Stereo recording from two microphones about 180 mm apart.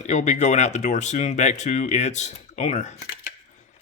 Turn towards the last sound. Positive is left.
turn(degrees=40)  # may be behind; listen again after turning